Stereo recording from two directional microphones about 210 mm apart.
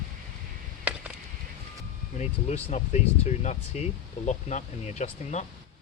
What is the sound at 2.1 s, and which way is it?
Speech, 30° left (ahead or behind).